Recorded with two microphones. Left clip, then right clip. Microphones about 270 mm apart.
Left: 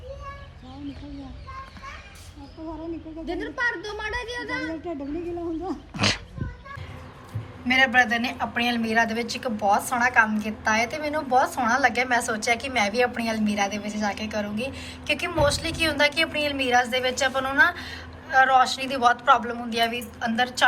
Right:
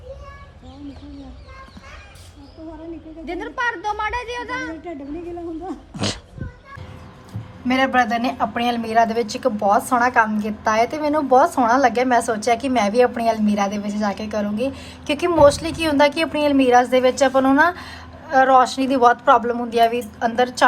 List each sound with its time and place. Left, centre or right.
3.4 s speech: centre
5.9 s dog: centre
7.7 s speech: right